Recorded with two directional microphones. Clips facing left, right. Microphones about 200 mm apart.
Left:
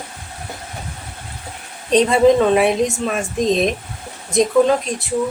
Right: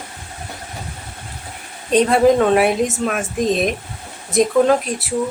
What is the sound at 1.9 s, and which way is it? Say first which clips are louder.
Speech: left 1 dB; 5° right (ahead or behind).